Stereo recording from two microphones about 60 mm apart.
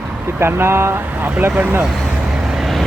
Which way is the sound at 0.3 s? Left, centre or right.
Right.